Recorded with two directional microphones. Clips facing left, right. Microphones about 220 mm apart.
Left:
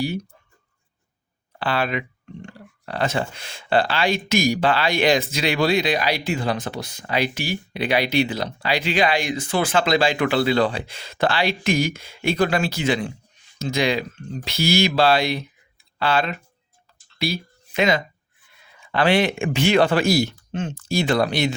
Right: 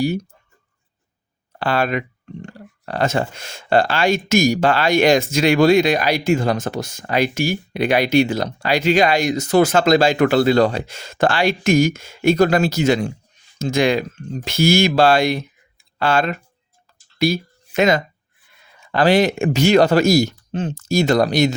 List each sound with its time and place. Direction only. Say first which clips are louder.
1.5 s speech: right 4 dB; 45° right (ahead or behind)
17.2 s a sound: right 7 dB; 45° right (ahead or behind)
18.8 s speech: right 4 dB; 40° right (ahead or behind)